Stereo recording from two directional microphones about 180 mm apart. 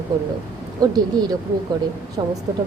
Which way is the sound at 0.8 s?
20° right (ahead or behind).